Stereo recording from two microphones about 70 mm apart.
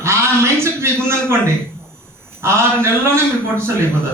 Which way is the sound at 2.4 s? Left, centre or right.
Right.